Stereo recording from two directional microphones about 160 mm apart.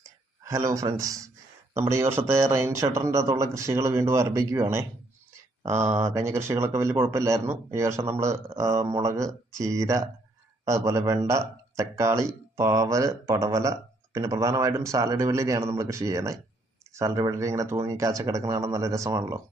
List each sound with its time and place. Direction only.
0.4 s speech: 20° right (ahead or behind)